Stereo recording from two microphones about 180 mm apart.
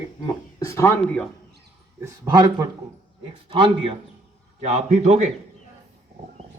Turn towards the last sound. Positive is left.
turn(degrees=-40)  # may be behind; listen again after turning